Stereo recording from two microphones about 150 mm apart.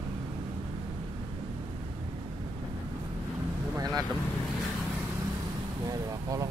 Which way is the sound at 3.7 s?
25° right (ahead or behind).